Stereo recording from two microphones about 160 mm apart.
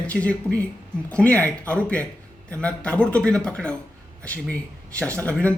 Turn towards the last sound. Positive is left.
turn(degrees=10)  # may be behind; listen again after turning